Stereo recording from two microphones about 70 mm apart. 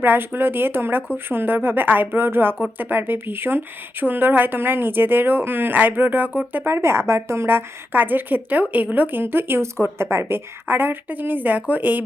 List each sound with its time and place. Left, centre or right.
0.0 s a woman's voice: right